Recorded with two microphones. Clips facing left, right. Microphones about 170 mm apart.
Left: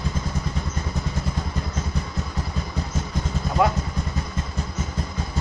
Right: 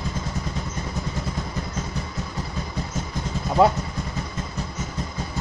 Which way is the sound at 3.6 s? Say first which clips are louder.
Right 4 dB; 30° right (ahead or behind).